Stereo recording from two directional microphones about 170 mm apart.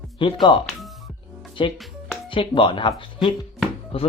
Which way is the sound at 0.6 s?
Centre (ahead or behind).